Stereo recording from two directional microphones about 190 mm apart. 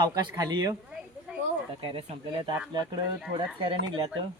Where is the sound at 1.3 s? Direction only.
5° right (ahead or behind).